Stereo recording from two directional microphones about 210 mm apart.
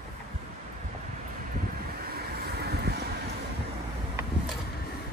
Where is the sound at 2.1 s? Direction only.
50° right (ahead or behind).